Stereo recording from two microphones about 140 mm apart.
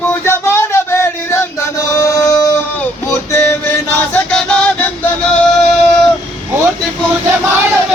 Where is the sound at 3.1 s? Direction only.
15° left (ahead or behind).